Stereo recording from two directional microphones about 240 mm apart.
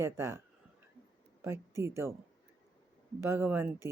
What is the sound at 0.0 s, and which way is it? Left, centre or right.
Speech, centre.